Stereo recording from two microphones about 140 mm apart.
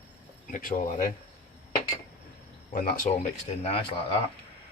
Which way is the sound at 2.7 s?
80° left.